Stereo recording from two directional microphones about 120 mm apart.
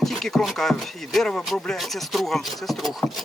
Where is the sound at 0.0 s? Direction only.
Centre (ahead or behind).